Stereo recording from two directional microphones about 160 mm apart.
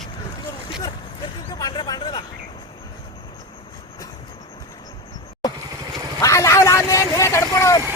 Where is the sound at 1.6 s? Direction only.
25° left (ahead or behind).